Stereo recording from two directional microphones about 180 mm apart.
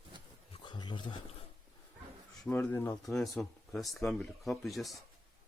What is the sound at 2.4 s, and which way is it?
Speech, 5° left (ahead or behind).